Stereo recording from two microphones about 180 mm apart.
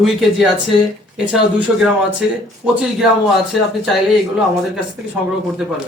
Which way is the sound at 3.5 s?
Centre (ahead or behind).